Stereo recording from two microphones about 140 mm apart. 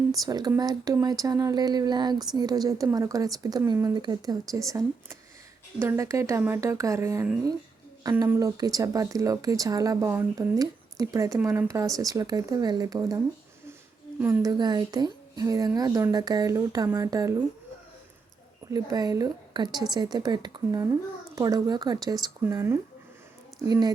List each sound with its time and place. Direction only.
0.3 s speech: 25° right (ahead or behind)
8.4 s speech: 25° right (ahead or behind)
14.2 s a woman's voice: 10° right (ahead or behind)
14.4 s speech: 30° right (ahead or behind)
18.7 s speech: 30° right (ahead or behind)